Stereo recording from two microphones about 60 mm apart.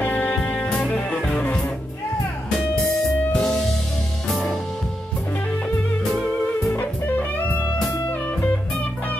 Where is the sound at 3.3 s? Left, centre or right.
Centre.